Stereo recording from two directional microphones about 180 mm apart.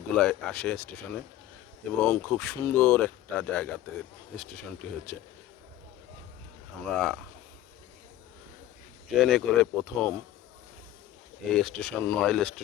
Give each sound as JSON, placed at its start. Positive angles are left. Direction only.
{"t": 0.2, "sound": "speech", "side_deg": 5}
{"t": 6.9, "sound": "speech", "side_deg": 5}
{"t": 9.1, "sound": "speech", "side_deg": 0}
{"t": 11.4, "sound": "speech", "side_deg": 5}